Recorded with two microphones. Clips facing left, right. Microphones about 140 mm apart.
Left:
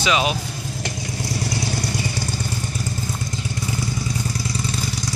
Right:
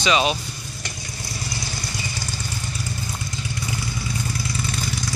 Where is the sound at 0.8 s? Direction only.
90° left; by 2.2 s 60° left (ahead or behind).